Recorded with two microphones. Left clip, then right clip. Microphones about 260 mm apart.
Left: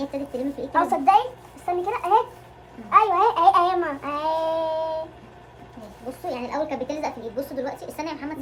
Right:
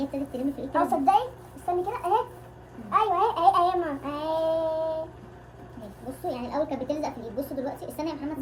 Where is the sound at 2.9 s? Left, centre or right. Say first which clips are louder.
Left 6 dB; left.